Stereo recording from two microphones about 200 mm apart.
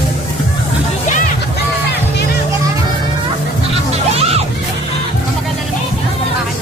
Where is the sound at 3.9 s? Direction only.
30° right (ahead or behind).